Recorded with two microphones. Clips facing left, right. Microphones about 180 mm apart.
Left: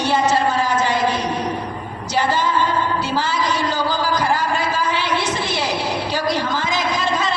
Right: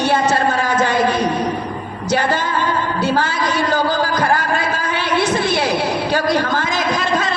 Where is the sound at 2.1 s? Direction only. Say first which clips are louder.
Right 1 dB; 55° right (ahead or behind).